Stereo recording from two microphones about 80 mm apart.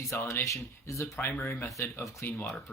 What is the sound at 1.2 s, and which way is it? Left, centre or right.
Speech, left.